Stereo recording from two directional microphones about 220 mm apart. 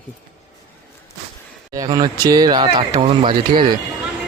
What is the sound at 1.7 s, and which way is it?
Speech, 15° right (ahead or behind).